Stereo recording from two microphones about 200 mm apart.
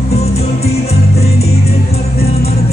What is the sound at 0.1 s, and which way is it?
Music, 30° left (ahead or behind).